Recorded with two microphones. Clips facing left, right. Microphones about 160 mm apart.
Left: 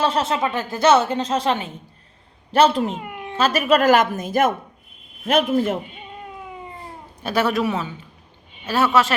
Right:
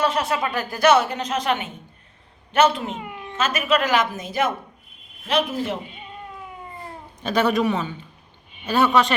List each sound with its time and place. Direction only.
0.0 s speech: 25° left (ahead or behind)
2.9 s a child's voice: centre (ahead or behind)
3.3 s a woman's voice: 35° left (ahead or behind)
7.2 s a man's voice: 5° left (ahead or behind)